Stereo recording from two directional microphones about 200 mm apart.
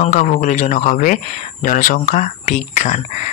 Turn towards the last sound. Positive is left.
turn(degrees=35)  # may be behind; listen again after turning